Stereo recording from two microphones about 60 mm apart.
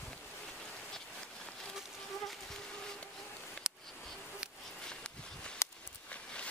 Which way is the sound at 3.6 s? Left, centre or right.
Centre.